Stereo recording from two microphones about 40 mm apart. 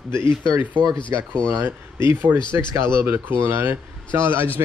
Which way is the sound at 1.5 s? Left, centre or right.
Right.